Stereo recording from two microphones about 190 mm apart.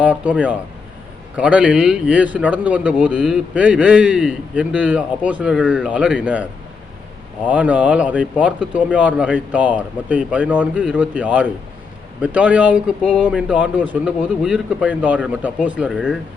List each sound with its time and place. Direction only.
0.0 s speech: 5° right (ahead or behind)